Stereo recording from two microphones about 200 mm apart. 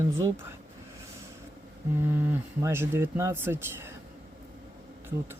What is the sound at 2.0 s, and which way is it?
Speech, 10° right (ahead or behind).